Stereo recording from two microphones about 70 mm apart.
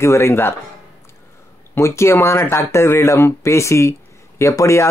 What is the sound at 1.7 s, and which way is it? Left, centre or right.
Speech, left.